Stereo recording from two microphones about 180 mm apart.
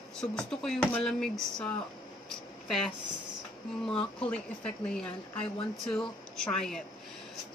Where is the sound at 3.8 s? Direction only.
5° left (ahead or behind).